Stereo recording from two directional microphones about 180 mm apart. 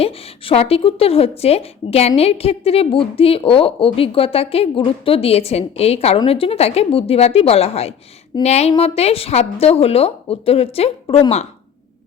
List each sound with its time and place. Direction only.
0.0 s a woman's voice: 35° left (ahead or behind)